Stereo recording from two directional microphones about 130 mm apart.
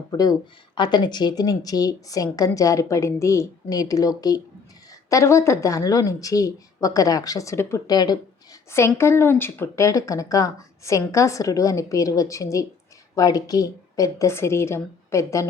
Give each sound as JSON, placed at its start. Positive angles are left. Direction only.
{"t": 0.1, "sound": "speech", "side_deg": 30}
{"t": 9.0, "sound": "speech", "side_deg": 20}